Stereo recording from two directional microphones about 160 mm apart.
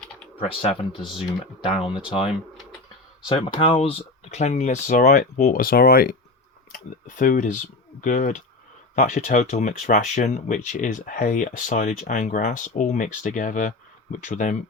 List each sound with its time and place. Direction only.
0.3 s speech: 35° left (ahead or behind)
3.2 s speech: 30° left (ahead or behind); by 6.1 s 70° left (ahead or behind)
6.7 s speech: 55° left (ahead or behind)